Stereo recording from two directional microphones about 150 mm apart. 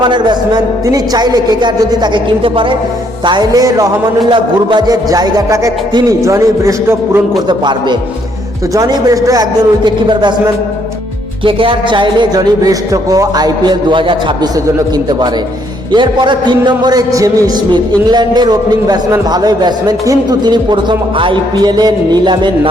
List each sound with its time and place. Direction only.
0.0 s a man's voice: 30° right (ahead or behind)
7.4 s a man's voice: 30° right (ahead or behind)
15.9 s a man's voice: 30° right (ahead or behind)